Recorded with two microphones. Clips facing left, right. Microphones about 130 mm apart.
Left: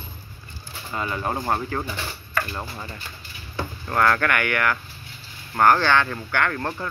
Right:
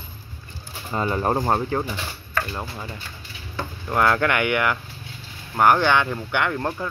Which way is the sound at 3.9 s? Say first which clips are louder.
Right 1 dB; 20° right (ahead or behind).